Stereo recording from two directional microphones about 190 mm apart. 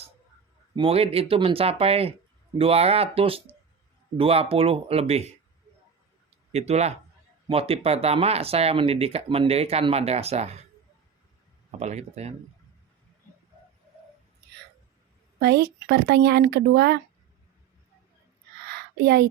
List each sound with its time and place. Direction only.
0.8 s speech: 30° right (ahead or behind)
6.5 s speech: 35° right (ahead or behind)
11.8 s speech: 35° right (ahead or behind)
15.4 s speech: 60° right (ahead or behind)
19.0 s speech: 60° right (ahead or behind)